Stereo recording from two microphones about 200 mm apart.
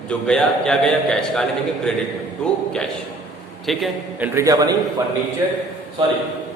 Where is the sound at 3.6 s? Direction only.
Centre (ahead or behind).